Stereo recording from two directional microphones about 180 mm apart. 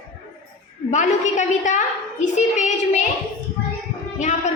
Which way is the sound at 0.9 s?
40° left (ahead or behind).